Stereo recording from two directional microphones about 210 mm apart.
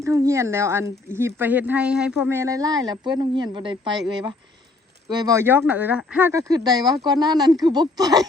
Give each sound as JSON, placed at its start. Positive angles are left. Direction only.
{"t": 0.0, "sound": "speech", "side_deg": -15}
{"t": 5.0, "sound": "speech", "side_deg": -20}